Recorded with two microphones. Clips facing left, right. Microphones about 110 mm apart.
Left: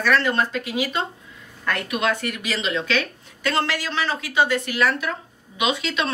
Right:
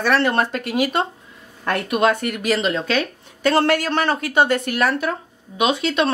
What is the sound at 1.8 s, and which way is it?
Speech, 45° right (ahead or behind).